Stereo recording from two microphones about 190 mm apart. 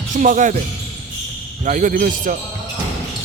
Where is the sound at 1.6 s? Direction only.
45° right (ahead or behind).